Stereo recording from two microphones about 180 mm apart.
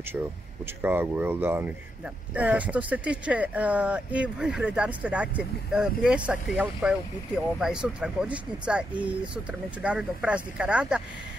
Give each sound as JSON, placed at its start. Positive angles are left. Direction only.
{"t": 0.8, "sound": "speech", "side_deg": -10}